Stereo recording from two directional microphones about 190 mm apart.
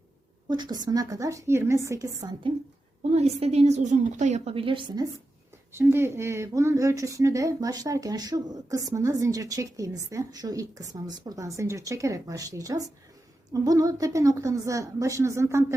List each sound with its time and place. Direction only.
0.4 s speech: 20° right (ahead or behind)
3.0 s a woman's voice: 35° right (ahead or behind)
5.7 s speech: 10° right (ahead or behind)